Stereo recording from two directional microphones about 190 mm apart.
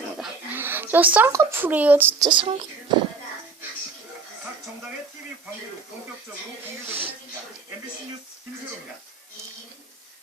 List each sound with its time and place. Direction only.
0.2 s speech: 10° right (ahead or behind); by 3.0 s 25° right (ahead or behind)